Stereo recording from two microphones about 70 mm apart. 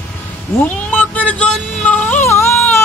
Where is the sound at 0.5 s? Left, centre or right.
Left.